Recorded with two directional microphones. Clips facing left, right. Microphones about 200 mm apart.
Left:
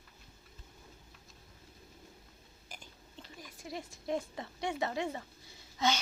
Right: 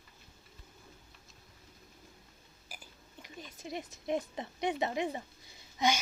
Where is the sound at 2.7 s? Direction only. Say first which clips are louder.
Left 1 dB; 10° right (ahead or behind).